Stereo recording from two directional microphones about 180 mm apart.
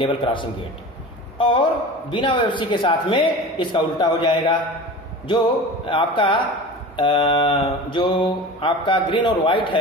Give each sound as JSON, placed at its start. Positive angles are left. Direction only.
{"t": 0.0, "sound": "a man's voice", "side_deg": 25}
{"t": 5.9, "sound": "a man's voice", "side_deg": 30}